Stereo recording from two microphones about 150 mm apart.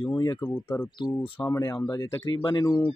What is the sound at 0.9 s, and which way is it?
Speech, 30° left (ahead or behind).